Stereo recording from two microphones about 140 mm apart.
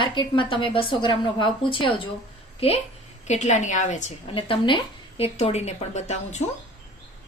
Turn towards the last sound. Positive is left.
turn(degrees=50)  # may be behind; listen again after turning